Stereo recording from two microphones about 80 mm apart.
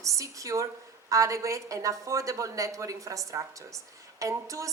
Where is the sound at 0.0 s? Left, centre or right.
Right.